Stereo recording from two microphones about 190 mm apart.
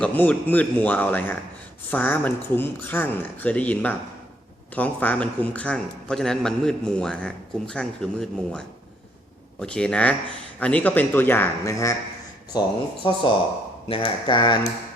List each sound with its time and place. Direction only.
0.0 s a man's voice: 10° left (ahead or behind); by 14.7 s 25° left (ahead or behind)